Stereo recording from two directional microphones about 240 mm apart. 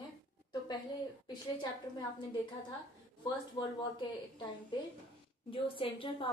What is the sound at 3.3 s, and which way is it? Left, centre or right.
A woman's voice, centre.